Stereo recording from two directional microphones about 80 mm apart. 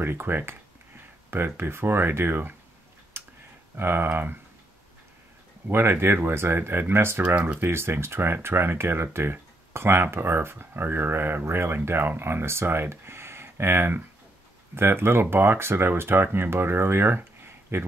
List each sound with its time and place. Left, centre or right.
0.0 s speech: right
3.1 s tick-tock: right
3.7 s speech: right
5.7 s speech: right